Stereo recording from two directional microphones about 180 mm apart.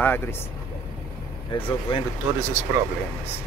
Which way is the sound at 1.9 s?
30° left (ahead or behind).